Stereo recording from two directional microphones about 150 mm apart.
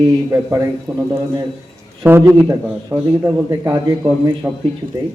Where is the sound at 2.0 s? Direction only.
15° right (ahead or behind).